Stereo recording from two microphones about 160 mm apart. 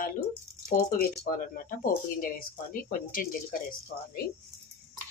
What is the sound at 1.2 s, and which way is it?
Speech, 65° left (ahead or behind).